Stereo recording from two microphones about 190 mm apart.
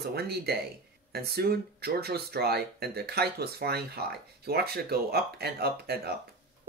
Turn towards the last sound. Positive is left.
turn(degrees=-55)  # may be behind; listen again after turning